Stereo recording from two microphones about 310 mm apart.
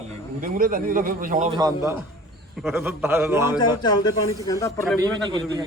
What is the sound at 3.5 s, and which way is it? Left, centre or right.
Speech, centre.